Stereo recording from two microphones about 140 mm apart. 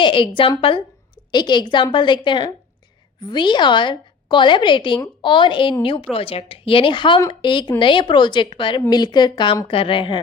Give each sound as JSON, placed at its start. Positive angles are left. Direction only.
{"t": 0.0, "sound": "a woman's voice", "side_deg": 35}